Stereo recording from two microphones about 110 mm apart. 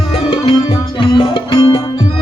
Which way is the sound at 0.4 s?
55° left (ahead or behind).